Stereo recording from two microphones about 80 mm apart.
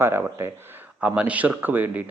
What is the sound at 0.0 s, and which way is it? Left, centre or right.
Speech, right.